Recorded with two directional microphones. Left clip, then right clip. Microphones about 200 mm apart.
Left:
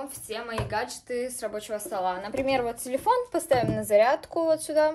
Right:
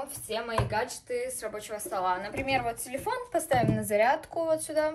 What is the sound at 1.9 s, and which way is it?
A woman's voice, 55° left (ahead or behind).